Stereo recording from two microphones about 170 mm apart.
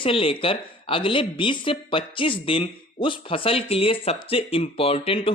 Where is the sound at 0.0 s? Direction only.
30° left (ahead or behind).